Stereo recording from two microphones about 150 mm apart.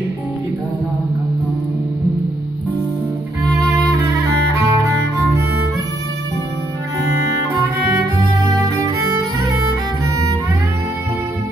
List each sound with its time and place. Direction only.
4.6 s music: 20° right (ahead or behind)